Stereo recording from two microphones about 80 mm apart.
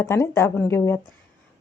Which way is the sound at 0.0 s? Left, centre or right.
Left.